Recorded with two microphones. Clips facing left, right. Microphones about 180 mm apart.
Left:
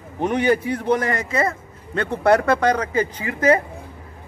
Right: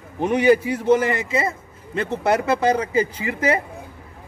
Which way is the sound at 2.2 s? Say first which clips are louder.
Left 3 dB; 5° right (ahead or behind).